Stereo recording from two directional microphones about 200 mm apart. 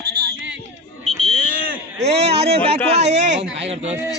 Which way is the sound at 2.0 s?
30° right (ahead or behind).